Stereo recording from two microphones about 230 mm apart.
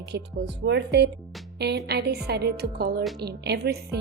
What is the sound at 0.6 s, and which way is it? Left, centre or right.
Speech, right.